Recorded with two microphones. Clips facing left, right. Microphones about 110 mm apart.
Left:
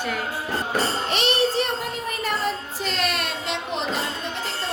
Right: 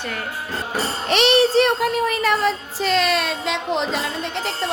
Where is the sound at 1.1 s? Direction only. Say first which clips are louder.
Right 9 dB; 80° right.